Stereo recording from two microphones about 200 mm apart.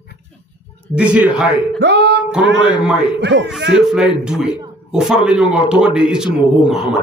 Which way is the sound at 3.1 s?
60° right (ahead or behind).